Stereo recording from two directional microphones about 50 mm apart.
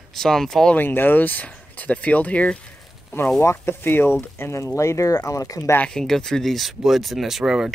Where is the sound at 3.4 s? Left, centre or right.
Left.